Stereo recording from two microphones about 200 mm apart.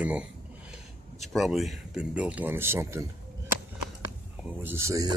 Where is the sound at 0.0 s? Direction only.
5° right (ahead or behind).